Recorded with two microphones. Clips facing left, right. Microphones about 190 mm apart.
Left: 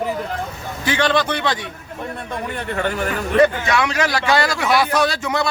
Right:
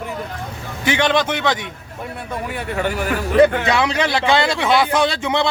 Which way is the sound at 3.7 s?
30° right (ahead or behind).